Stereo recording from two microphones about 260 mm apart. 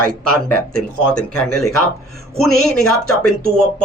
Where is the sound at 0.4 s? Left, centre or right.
Right.